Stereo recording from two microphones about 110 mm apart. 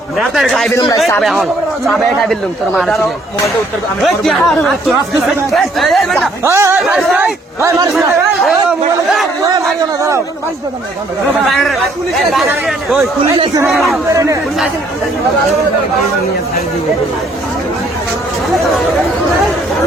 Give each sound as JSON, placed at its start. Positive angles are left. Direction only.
{"t": 0.2, "sound": "speech", "side_deg": 0}
{"t": 4.0, "sound": "speech", "side_deg": 5}
{"t": 6.4, "sound": "speech", "side_deg": -25}
{"t": 6.7, "sound": "speech", "side_deg": -5}
{"t": 7.6, "sound": "speech", "side_deg": -25}
{"t": 7.9, "sound": "speech", "side_deg": 0}
{"t": 9.4, "sound": "crowd", "side_deg": -30}
{"t": 11.4, "sound": "speech", "side_deg": 0}
{"t": 14.1, "sound": "speech", "side_deg": -30}